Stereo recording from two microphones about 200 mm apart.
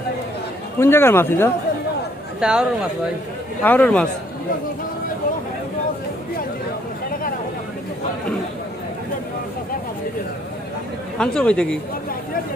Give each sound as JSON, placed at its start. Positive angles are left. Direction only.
{"t": 0.8, "sound": "speech", "side_deg": 10}
{"t": 2.4, "sound": "speech", "side_deg": -5}
{"t": 3.6, "sound": "speech", "side_deg": 10}
{"t": 7.1, "sound": "a sound", "side_deg": 45}
{"t": 11.2, "sound": "speech", "side_deg": 5}